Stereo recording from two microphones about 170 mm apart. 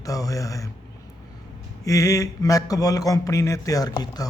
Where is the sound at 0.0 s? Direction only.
20° left (ahead or behind).